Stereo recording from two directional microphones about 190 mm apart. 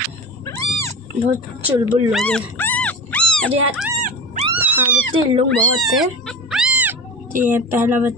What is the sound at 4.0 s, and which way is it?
Dog, 45° right (ahead or behind).